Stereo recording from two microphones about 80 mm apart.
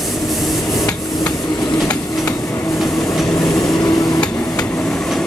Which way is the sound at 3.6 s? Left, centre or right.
Left.